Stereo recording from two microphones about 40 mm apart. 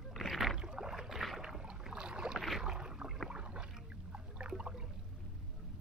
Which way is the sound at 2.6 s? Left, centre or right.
Centre.